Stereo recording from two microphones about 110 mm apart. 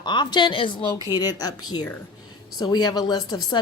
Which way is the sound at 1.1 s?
35° left (ahead or behind).